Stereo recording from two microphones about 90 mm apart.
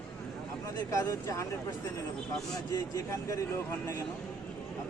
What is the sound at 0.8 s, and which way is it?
Speech, 40° left (ahead or behind).